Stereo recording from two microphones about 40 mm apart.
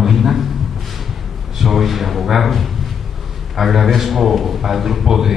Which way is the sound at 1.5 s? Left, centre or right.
Centre.